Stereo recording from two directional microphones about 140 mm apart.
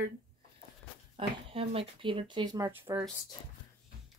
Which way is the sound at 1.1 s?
45° right (ahead or behind).